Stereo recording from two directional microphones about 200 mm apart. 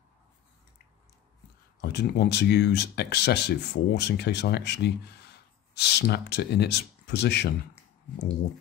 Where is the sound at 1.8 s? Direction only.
55° left (ahead or behind).